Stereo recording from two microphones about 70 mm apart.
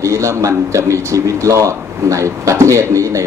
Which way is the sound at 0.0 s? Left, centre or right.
Right.